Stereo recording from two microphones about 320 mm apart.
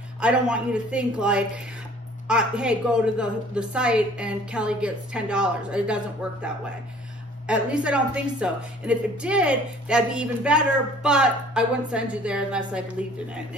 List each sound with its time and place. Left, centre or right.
0.2 s a woman's voice: centre
7.4 s a woman's voice: centre